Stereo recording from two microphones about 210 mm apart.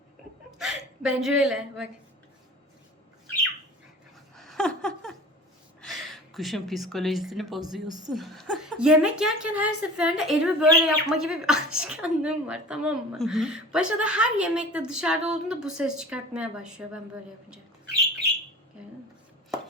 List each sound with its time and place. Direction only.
0.6 s a woman's voice: 5° right (ahead or behind)
4.4 s a sound: centre (ahead or behind)
5.8 s speech: centre (ahead or behind)
7.9 s a woman's voice: 20° right (ahead or behind)
8.1 s a woman's voice: centre (ahead or behind)